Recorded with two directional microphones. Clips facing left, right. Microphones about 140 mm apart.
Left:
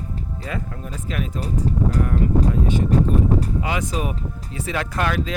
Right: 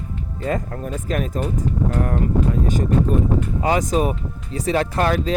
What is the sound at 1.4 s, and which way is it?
Speech, 35° left (ahead or behind).